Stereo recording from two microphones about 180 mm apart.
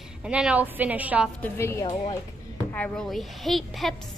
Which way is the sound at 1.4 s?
15° left (ahead or behind).